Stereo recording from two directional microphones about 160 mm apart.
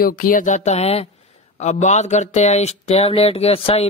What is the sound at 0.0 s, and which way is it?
Speech, 60° left (ahead or behind).